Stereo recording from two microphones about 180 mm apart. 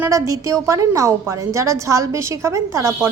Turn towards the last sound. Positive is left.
turn(degrees=-15)  # may be behind; listen again after turning